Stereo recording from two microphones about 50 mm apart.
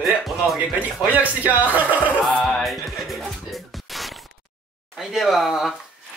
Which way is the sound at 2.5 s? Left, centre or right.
Centre.